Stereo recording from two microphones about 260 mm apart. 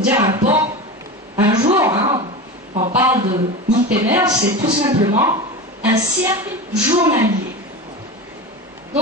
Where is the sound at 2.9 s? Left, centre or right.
Centre.